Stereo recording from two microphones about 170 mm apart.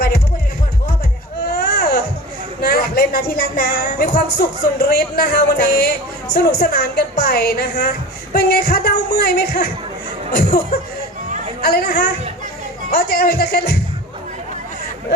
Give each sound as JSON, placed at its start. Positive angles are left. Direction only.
{"t": 1.5, "sound": "baby cry", "side_deg": 65}
{"t": 2.6, "sound": "a woman's voice", "side_deg": 65}
{"t": 10.7, "sound": "a woman's voice", "side_deg": 65}